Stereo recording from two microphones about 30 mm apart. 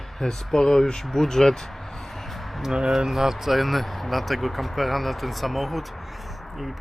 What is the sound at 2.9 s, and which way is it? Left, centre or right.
Speech, centre.